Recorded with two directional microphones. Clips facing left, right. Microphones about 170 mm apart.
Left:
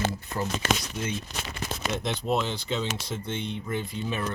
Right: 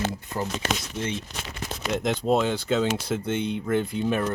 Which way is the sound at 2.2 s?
50° right (ahead or behind).